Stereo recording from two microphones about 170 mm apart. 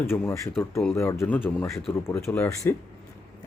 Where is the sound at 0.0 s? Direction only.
15° left (ahead or behind).